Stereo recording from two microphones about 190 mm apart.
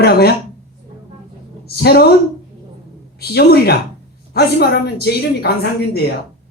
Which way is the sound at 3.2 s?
55° left (ahead or behind).